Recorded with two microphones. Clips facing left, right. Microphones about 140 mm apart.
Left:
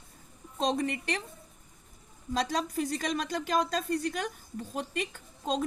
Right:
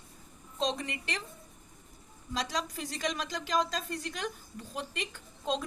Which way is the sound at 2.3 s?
50° left (ahead or behind).